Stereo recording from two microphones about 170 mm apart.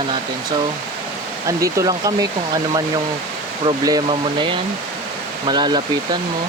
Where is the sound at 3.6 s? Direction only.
25° right (ahead or behind).